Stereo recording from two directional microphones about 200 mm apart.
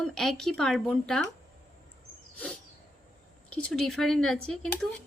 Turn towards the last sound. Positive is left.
turn(degrees=5)  # may be behind; listen again after turning